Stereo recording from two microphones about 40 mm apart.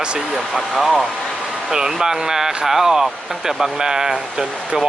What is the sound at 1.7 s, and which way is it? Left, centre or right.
Speech, centre.